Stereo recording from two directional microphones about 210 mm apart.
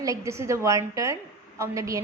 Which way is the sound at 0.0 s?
15° right (ahead or behind).